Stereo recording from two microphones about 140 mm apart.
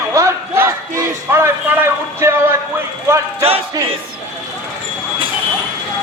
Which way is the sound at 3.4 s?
45° right (ahead or behind).